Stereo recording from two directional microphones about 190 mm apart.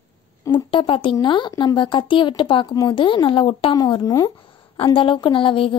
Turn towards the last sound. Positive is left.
turn(degrees=25)  # may be behind; listen again after turning